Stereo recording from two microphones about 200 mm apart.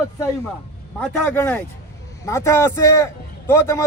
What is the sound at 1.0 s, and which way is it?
Speech, 5° left (ahead or behind).